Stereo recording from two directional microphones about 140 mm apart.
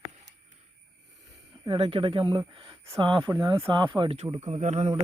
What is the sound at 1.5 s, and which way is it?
Speech, 40° right (ahead or behind).